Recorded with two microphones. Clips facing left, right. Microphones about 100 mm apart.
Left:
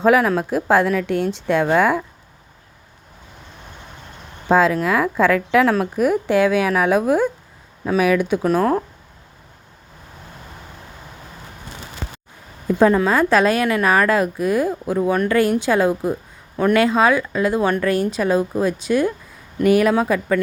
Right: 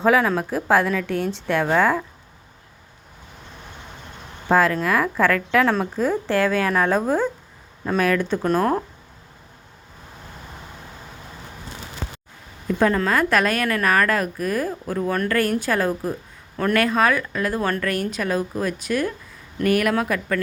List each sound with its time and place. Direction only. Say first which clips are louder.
0.0 s a woman's voice: left 3 dB; 10° left (ahead or behind)
0.9 s a woman's voice: left 4 dB; 5° left (ahead or behind)
4.4 s a woman's voice: left 3 dB; 15° left (ahead or behind); by 8.8 s centre (ahead or behind)
12.6 s a woman's voice: left 5 dB; 25° left (ahead or behind)
16.8 s a woman's voice: left 4 dB; 20° left (ahead or behind)